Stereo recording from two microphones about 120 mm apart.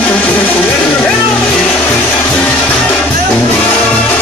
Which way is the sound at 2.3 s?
10° left (ahead or behind).